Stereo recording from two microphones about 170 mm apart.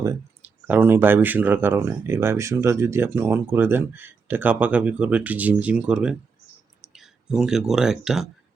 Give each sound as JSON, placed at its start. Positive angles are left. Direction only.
{"t": 0.0, "sound": "speech", "side_deg": -15}